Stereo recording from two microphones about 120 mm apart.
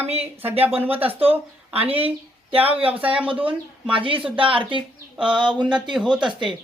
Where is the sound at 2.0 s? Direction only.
50° right (ahead or behind).